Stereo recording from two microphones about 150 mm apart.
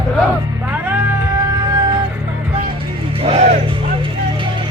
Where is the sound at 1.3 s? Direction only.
25° right (ahead or behind).